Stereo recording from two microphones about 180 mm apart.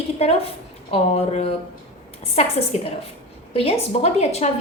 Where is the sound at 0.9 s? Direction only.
35° left (ahead or behind).